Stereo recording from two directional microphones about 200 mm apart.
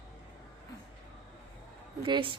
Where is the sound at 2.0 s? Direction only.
25° right (ahead or behind).